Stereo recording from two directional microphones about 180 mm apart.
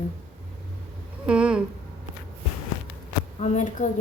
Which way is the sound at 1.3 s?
5° right (ahead or behind).